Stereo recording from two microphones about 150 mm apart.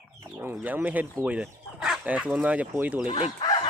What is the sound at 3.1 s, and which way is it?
Speech, 45° left (ahead or behind).